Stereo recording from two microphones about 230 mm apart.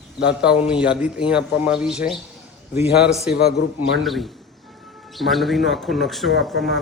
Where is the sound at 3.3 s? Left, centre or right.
Left.